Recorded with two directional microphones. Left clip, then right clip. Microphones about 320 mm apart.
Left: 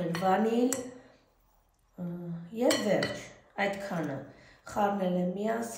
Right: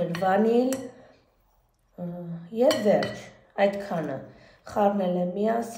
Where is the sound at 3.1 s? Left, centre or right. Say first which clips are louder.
Right 6 dB; centre.